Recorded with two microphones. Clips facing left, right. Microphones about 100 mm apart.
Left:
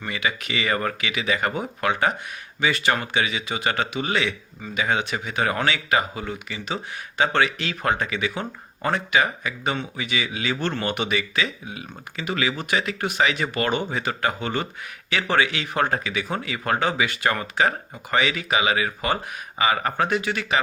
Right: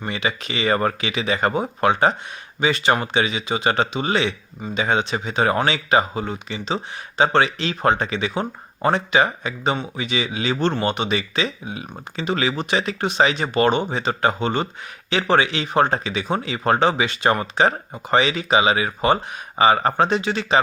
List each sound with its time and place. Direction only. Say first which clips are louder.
0.0 s speech: right 2 dB; 25° right (ahead or behind)